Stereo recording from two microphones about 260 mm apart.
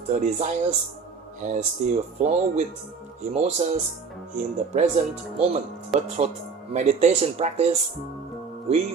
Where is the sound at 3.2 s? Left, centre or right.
Right.